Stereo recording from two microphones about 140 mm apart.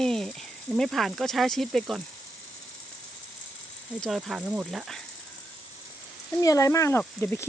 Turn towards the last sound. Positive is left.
turn(degrees=15)  # may be behind; listen again after turning